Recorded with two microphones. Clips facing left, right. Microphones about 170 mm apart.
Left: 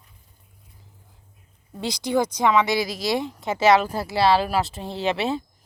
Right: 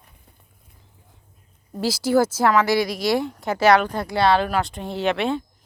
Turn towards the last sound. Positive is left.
turn(degrees=0)  # may be behind; listen again after turning